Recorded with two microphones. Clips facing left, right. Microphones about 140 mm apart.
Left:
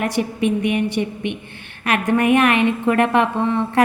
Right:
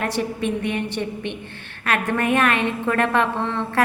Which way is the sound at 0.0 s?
15° left (ahead or behind).